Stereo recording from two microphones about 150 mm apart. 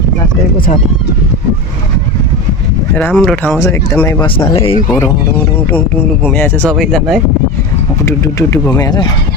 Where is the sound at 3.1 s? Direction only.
5° left (ahead or behind).